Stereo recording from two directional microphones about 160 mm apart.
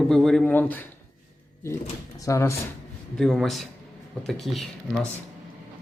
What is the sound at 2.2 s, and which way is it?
Speech, 20° left (ahead or behind).